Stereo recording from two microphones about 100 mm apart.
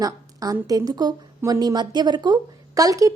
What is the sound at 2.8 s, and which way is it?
Speech, 35° right (ahead or behind).